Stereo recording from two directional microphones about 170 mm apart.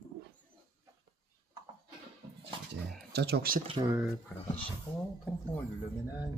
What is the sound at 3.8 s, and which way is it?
Speech, 20° right (ahead or behind).